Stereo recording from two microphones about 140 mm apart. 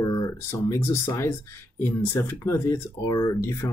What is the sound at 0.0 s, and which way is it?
Speech, 25° left (ahead or behind).